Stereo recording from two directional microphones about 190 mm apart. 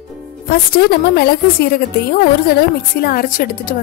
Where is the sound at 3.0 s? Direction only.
50° left (ahead or behind).